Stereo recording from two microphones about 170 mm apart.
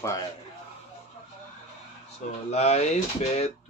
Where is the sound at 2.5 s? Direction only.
40° left (ahead or behind).